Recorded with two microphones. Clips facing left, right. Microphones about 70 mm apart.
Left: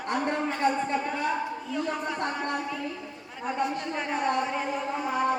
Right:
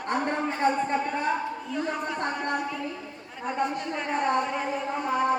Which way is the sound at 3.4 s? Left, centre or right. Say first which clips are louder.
Right 1 dB; centre.